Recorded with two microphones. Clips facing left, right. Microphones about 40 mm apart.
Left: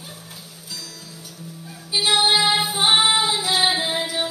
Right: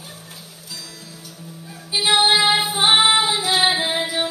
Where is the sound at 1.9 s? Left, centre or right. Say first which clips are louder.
Right 2 dB; centre.